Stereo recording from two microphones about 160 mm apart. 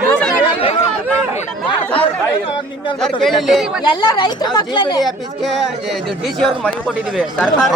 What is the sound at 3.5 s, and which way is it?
Speech, centre (ahead or behind).